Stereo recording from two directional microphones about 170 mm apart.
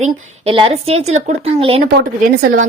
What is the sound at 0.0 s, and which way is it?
A woman's voice, 35° right (ahead or behind).